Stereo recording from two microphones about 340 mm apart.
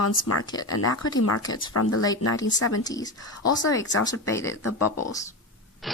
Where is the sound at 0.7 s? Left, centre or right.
Left.